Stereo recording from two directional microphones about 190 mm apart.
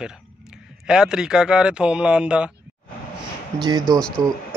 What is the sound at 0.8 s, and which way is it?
Speech, 5° right (ahead or behind).